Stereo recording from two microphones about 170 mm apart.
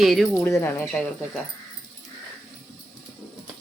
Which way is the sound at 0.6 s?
10° left (ahead or behind).